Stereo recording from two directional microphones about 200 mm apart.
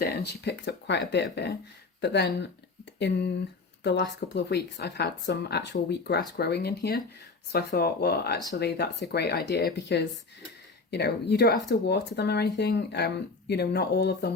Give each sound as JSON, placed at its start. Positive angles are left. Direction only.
{"t": 0.0, "sound": "speech", "side_deg": 55}